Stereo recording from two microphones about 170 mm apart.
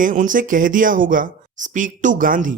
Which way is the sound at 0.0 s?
50° right (ahead or behind).